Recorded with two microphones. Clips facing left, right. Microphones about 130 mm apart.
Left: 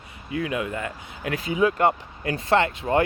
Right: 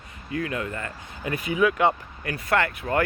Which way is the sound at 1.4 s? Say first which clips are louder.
Left 1 dB; 25° left (ahead or behind).